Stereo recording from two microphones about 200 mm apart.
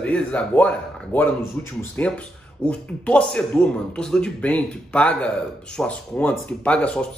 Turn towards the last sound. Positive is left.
turn(degrees=5)  # may be behind; listen again after turning